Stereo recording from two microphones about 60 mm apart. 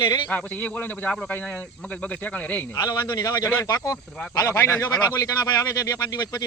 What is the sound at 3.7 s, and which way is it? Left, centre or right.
Speech, left.